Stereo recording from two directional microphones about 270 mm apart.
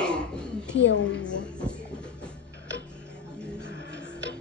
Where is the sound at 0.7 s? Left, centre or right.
Left.